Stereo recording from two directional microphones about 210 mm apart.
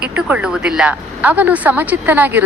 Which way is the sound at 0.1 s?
5° right (ahead or behind).